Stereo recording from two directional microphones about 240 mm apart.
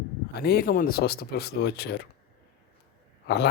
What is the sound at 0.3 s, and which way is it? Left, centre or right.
Speech, left.